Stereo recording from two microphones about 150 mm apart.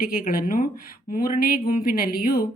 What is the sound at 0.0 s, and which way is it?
Speech, 70° left (ahead or behind).